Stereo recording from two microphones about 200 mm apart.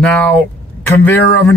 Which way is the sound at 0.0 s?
5° left (ahead or behind).